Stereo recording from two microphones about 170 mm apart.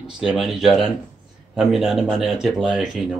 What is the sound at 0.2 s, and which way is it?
Speech, centre (ahead or behind).